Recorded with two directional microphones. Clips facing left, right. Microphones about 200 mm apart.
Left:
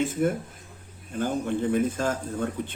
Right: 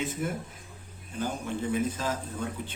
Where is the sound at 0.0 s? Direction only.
50° left (ahead or behind).